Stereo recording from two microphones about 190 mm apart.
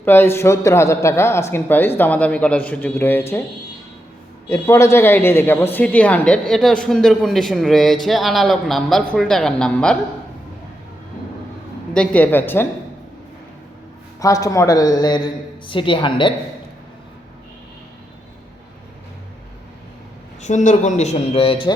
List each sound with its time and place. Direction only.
0.0 s speech: 10° left (ahead or behind)
4.4 s speech: 15° left (ahead or behind)
11.9 s speech: 5° left (ahead or behind)
14.2 s a woman's voice: 15° left (ahead or behind)
20.4 s a man's voice: 40° left (ahead or behind)